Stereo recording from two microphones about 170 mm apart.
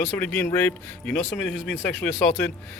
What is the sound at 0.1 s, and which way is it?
Speech, 10° left (ahead or behind).